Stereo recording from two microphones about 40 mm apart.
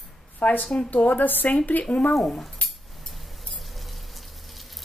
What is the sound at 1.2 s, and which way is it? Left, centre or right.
Speech, left.